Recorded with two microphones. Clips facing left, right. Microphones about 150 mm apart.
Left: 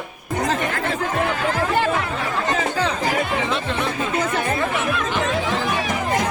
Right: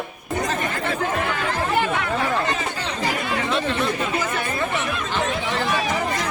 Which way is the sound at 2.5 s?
90° left.